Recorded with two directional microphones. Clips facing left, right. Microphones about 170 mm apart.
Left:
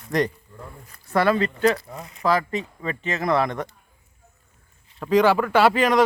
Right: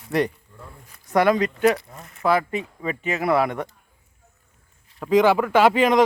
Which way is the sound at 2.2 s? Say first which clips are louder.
Right 1 dB; 10° right (ahead or behind).